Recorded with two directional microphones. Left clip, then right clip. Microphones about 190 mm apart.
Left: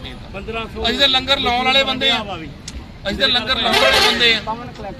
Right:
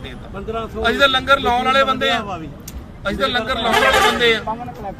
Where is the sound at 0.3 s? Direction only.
75° right (ahead or behind).